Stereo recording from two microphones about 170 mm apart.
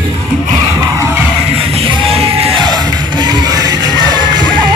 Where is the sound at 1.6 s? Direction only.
35° right (ahead or behind).